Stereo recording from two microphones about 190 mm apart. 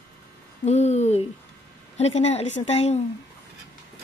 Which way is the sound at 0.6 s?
35° left (ahead or behind).